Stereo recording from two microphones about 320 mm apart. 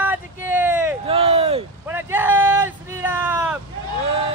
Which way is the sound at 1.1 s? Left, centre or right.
Centre.